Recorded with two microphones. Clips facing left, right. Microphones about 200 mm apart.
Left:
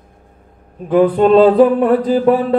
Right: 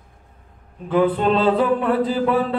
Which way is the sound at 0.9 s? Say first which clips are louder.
Left 8 dB; 40° left (ahead or behind).